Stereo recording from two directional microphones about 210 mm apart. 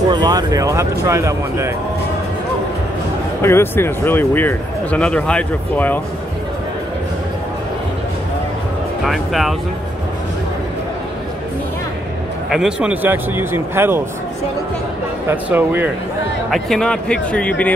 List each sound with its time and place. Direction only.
0.1 s speech: 20° right (ahead or behind)
3.4 s speech: 10° left (ahead or behind)
9.0 s speech: centre (ahead or behind)
12.4 s speech: 5° right (ahead or behind)
15.2 s speech: 10° right (ahead or behind)